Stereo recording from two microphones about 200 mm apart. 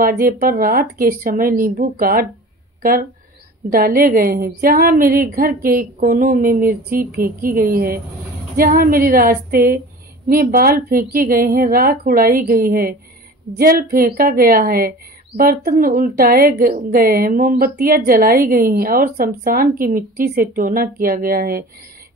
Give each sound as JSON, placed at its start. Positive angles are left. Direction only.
{"t": 0.0, "sound": "a woman's voice", "side_deg": -45}